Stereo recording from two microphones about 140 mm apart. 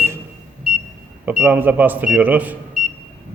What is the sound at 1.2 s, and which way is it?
Speech, 15° right (ahead or behind).